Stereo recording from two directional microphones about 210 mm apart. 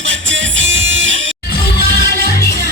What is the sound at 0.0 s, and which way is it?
Music, 60° right (ahead or behind).